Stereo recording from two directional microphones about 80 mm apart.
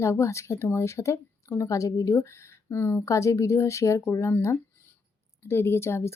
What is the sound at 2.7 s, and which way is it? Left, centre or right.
Speech, left.